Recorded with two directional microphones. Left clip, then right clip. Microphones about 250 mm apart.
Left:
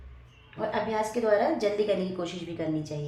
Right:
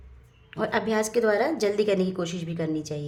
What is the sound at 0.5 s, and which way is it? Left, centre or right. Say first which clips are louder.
A woman's voice: right 3 dB; right.